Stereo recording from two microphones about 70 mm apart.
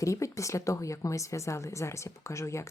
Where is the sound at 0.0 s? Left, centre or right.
Left.